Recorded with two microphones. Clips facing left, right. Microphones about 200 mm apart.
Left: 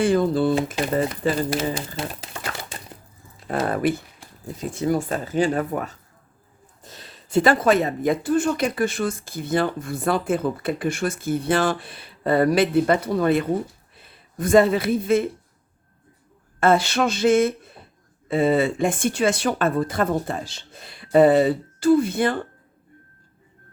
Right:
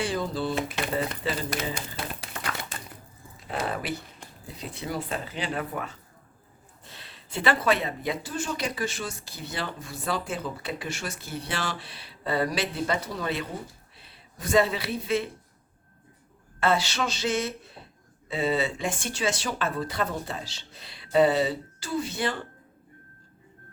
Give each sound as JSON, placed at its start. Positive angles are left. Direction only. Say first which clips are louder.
{"t": 0.0, "sound": "speech", "louder": "left 10 dB", "side_deg": 55}
{"t": 3.4, "sound": "speech", "louder": "left 9 dB", "side_deg": 50}
{"t": 16.6, "sound": "speech", "louder": "left 7 dB", "side_deg": 50}